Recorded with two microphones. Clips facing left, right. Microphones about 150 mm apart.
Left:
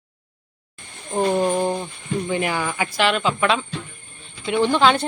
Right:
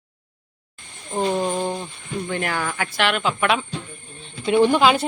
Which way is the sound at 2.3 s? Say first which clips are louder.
Left 1 dB; 5° left (ahead or behind).